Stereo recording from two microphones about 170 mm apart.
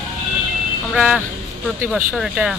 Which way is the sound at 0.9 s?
5° right (ahead or behind).